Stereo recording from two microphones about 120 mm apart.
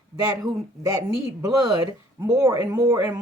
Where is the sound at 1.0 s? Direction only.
30° right (ahead or behind).